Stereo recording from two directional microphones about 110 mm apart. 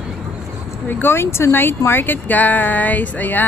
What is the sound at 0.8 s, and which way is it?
Speech, 20° left (ahead or behind).